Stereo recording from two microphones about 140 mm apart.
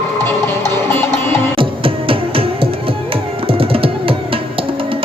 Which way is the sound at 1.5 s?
40° right (ahead or behind).